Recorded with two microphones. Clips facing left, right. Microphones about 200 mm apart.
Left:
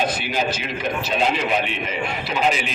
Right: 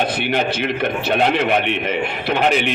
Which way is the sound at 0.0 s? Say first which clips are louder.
Right 3 dB; 60° right (ahead or behind).